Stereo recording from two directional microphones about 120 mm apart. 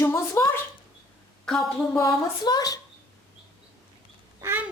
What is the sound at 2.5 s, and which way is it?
Speech, 30° left (ahead or behind).